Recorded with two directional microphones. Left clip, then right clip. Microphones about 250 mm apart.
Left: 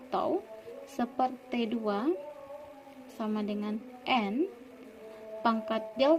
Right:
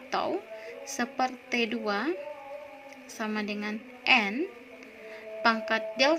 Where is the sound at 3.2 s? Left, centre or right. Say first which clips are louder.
Right 2 dB; centre.